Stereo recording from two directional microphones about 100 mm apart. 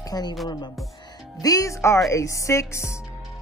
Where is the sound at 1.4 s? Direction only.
35° left (ahead or behind).